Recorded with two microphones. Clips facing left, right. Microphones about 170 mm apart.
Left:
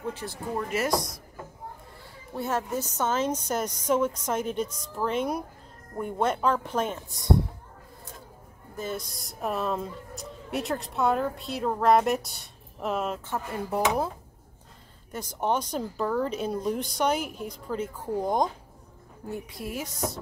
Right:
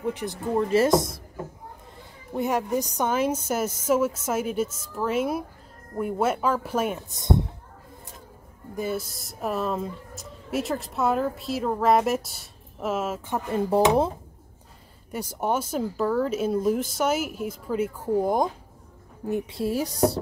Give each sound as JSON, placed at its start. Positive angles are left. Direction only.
{"t": 0.0, "sound": "a woman's voice", "side_deg": -15}
{"t": 0.6, "sound": "speech", "side_deg": -30}
{"t": 2.3, "sound": "a woman's voice", "side_deg": -15}
{"t": 7.1, "sound": "speech", "side_deg": -20}
{"t": 8.7, "sound": "speech", "side_deg": -10}
{"t": 13.3, "sound": "speech", "side_deg": -25}
{"t": 15.1, "sound": "a woman's voice", "side_deg": -10}
{"t": 19.2, "sound": "speech", "side_deg": -25}